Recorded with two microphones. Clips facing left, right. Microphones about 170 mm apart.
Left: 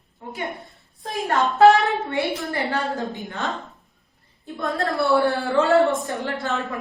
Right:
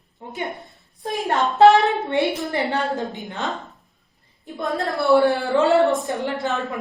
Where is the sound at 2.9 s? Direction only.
Centre (ahead or behind).